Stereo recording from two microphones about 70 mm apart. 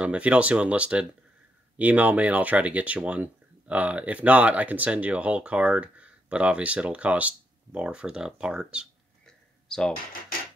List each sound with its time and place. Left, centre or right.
0.0 s speech: centre
9.7 s speech: centre